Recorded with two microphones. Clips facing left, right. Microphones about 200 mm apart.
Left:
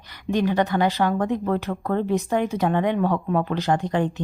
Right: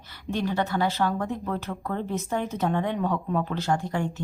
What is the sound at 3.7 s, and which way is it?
Speech, 60° left (ahead or behind).